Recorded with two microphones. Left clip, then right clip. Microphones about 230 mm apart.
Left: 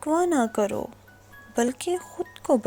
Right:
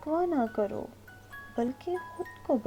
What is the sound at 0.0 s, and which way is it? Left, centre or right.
A woman's voice, left.